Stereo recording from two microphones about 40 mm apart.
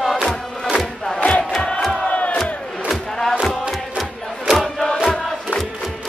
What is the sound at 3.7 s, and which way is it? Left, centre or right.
Chant, centre.